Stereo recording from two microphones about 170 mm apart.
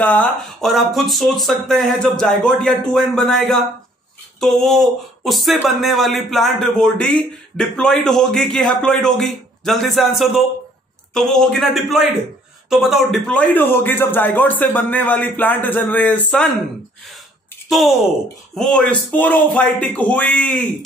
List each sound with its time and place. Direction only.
0.0 s a man's voice: 5° left (ahead or behind)
17.6 s a man's voice: centre (ahead or behind)